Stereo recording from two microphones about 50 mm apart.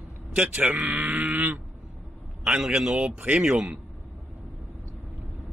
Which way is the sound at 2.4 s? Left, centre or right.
Centre.